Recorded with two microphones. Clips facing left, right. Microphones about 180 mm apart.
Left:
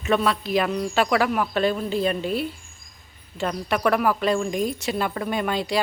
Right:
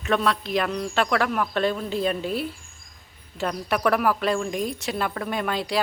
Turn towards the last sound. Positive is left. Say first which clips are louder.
# left 2 dB
turn(degrees=0)  # may be behind; listen again after turning